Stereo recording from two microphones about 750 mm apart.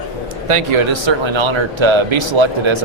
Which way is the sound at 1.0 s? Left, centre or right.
Right.